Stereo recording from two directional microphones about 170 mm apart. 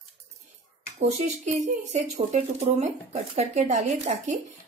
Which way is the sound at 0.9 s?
40° right (ahead or behind).